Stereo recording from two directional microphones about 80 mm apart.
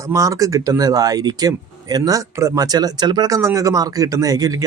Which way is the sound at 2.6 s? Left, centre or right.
Right.